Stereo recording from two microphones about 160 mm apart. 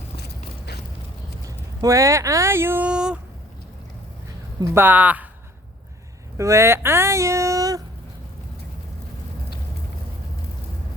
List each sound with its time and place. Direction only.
0.2 s a sound: 90° left
1.5 s speech: 20° right (ahead or behind)
4.6 s speech: 15° right (ahead or behind)
6.3 s speech: 20° right (ahead or behind)